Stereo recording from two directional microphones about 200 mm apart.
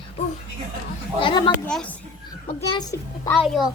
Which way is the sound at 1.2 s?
25° left (ahead or behind).